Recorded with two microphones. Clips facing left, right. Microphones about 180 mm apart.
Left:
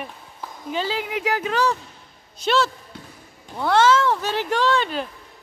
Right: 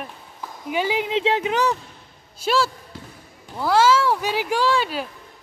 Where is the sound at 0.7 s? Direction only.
15° right (ahead or behind).